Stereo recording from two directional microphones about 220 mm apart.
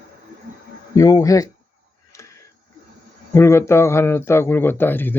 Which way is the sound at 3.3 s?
10° left (ahead or behind).